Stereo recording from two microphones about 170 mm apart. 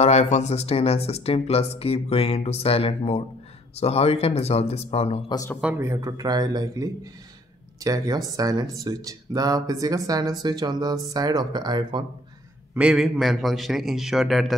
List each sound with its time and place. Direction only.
0.0 s speech: 40° left (ahead or behind)
5.6 s speech: 10° right (ahead or behind)
12.7 s a man's voice: 5° right (ahead or behind)